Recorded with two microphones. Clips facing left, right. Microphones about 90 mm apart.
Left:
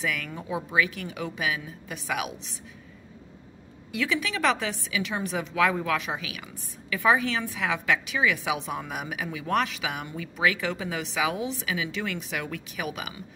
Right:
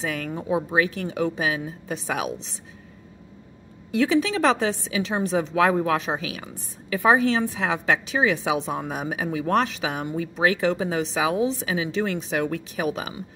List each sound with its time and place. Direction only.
0.0 s a woman's voice: 30° right (ahead or behind)
3.9 s a woman's voice: 30° right (ahead or behind)